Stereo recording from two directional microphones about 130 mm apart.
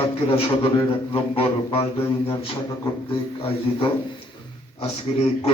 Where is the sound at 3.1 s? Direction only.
45° left (ahead or behind).